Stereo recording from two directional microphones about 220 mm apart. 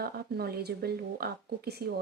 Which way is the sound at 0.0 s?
45° right (ahead or behind).